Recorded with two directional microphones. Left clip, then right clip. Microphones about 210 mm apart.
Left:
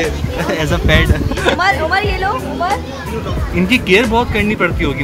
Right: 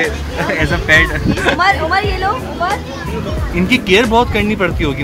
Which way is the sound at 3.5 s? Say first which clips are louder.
Even; centre (ahead or behind).